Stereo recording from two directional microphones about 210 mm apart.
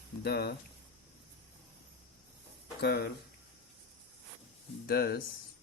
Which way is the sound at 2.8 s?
50° left (ahead or behind).